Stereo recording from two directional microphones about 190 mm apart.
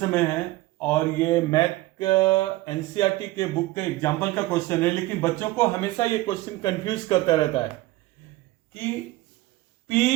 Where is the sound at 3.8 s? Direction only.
10° left (ahead or behind).